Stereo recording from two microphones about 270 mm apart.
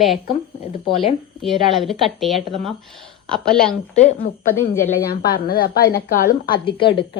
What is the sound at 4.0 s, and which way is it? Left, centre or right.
A woman's voice, left.